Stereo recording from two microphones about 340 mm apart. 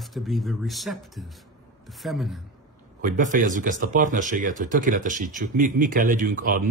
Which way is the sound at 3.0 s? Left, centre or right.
Right.